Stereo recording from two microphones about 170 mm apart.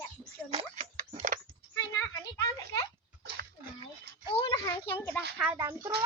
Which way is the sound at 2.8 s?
70° right (ahead or behind).